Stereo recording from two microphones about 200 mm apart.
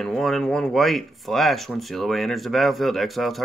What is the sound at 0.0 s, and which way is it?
Speech, centre (ahead or behind).